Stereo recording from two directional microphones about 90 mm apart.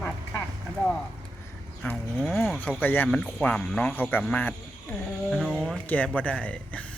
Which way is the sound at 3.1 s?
10° left (ahead or behind).